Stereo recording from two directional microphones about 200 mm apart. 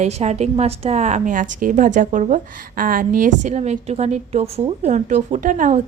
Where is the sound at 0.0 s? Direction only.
35° right (ahead or behind).